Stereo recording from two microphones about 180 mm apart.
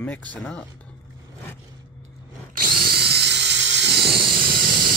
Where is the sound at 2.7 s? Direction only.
60° right (ahead or behind).